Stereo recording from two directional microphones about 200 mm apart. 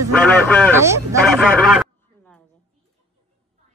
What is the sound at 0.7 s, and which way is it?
Speech, 15° right (ahead or behind).